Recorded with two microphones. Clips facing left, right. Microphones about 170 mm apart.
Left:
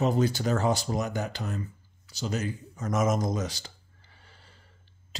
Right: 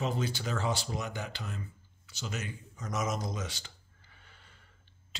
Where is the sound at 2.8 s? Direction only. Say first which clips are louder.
Left 8 dB; 50° left (ahead or behind).